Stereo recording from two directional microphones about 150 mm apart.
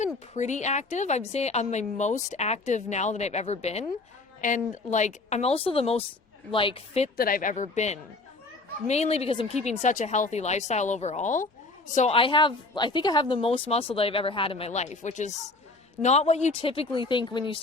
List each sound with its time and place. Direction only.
0.3 s speech: 50° left (ahead or behind)
4.4 s speech: 60° left (ahead or behind); by 7.1 s 40° left (ahead or behind)
7.2 s speech: 75° left (ahead or behind); by 12.1 s 55° left (ahead or behind)
12.1 s speech: 35° left (ahead or behind)